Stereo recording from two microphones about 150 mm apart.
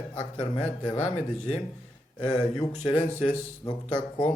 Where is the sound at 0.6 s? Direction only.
45° left (ahead or behind).